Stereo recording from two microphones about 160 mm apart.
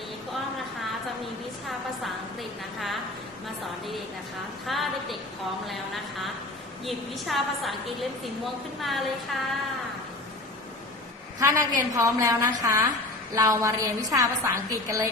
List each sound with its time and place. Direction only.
1.6 s a woman's voice: centre (ahead or behind)
4.6 s a woman's voice: centre (ahead or behind)
8.8 s a woman's voice: centre (ahead or behind)
11.3 s a woman's voice: 20° right (ahead or behind)